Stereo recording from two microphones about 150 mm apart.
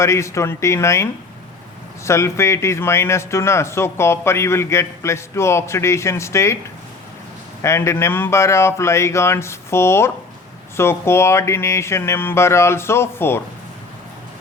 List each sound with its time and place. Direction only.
0.0 s speech: 20° left (ahead or behind)
2.0 s speech: 20° left (ahead or behind)
7.6 s speech: 20° left (ahead or behind)